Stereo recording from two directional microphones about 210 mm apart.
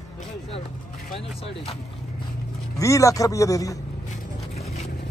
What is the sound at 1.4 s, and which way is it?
Speech, 25° left (ahead or behind).